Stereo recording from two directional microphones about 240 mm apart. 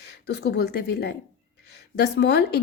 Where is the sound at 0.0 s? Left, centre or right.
Left.